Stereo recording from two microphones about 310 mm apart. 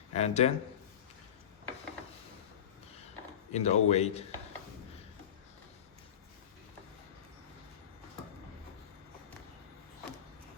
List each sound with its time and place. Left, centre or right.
0.1 s speech: left
3.5 s speech: left